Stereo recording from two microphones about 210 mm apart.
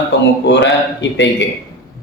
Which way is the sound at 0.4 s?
55° left (ahead or behind).